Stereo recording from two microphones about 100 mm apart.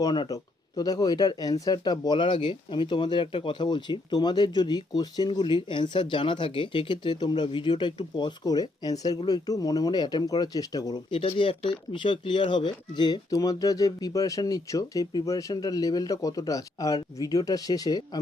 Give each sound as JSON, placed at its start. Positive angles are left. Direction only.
{"t": 0.0, "sound": "speech", "side_deg": 45}
{"t": 11.1, "sound": "speech", "side_deg": 65}
{"t": 13.3, "sound": "speech", "side_deg": 35}